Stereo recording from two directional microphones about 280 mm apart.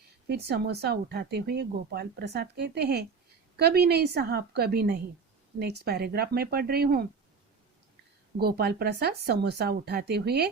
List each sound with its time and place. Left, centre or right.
0.3 s speech: right
8.4 s speech: right